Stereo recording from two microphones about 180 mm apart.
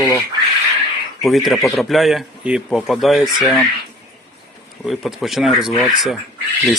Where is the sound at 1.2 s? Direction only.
Centre (ahead or behind).